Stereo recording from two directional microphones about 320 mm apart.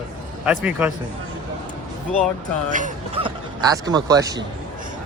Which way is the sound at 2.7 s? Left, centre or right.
Right.